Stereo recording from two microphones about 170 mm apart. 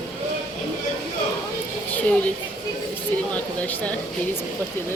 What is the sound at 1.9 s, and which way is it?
Speech, 10° left (ahead or behind).